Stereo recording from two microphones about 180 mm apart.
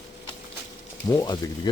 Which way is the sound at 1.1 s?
20° left (ahead or behind).